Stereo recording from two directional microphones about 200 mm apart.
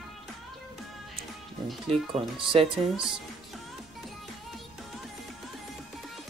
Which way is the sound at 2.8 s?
Centre (ahead or behind).